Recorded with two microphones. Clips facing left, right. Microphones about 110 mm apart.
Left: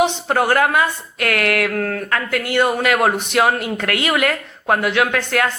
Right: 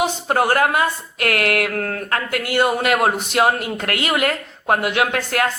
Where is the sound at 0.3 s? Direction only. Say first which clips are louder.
Left 1 dB; 40° right (ahead or behind).